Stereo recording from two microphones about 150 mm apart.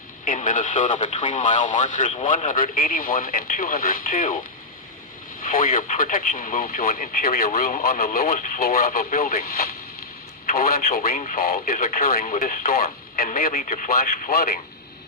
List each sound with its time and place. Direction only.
0.3 s speech: 60° left (ahead or behind)
5.4 s speech: 70° left (ahead or behind); by 14.5 s 90° left